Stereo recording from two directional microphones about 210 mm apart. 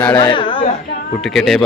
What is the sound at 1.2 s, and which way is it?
Speech, centre (ahead or behind).